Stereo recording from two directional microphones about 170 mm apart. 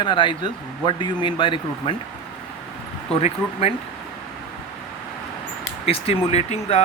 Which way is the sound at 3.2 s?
35° left (ahead or behind).